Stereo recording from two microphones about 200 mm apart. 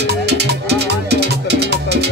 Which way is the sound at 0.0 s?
55° right (ahead or behind).